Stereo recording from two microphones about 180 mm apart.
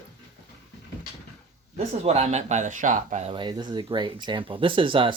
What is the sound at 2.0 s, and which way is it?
Speech, 40° right (ahead or behind).